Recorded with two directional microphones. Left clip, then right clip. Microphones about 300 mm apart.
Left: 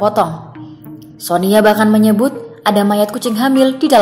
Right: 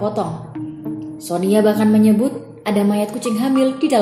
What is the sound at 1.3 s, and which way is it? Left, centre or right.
A woman's voice, centre.